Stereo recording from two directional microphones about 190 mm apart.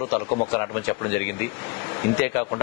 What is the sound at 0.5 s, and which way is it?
A man's voice, 10° left (ahead or behind).